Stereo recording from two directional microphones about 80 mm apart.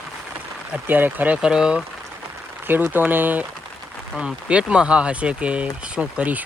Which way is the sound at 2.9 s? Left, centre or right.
Right.